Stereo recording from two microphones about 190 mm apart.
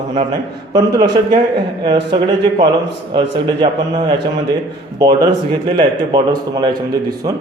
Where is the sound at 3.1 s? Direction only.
25° right (ahead or behind).